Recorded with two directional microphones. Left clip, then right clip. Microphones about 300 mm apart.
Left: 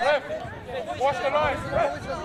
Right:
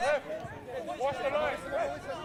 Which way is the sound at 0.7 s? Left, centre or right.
Right.